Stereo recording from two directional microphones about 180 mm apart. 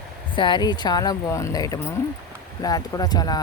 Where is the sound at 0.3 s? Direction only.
25° left (ahead or behind).